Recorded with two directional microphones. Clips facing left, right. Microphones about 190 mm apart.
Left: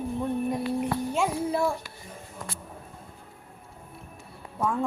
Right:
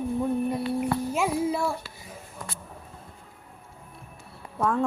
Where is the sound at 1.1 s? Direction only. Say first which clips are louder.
Right 1 dB; 5° right (ahead or behind).